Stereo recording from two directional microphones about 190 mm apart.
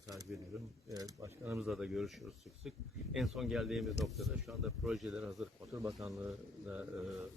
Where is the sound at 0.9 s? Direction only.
20° right (ahead or behind).